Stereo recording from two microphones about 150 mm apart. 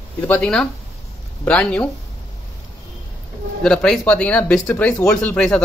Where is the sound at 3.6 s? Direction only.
5° left (ahead or behind).